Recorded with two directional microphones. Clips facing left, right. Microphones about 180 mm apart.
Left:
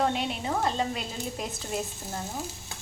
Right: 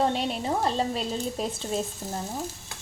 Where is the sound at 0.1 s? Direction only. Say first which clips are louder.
Right 2 dB; 35° right (ahead or behind).